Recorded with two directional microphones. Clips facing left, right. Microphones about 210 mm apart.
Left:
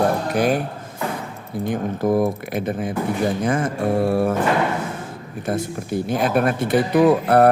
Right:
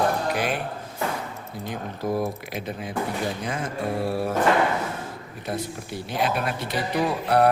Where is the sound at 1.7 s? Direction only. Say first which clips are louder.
Left 8 dB; 50° left (ahead or behind).